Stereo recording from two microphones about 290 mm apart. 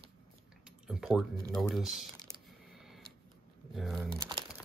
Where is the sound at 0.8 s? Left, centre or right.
Centre.